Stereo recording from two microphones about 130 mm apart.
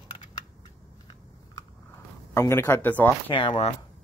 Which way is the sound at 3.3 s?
40° left (ahead or behind).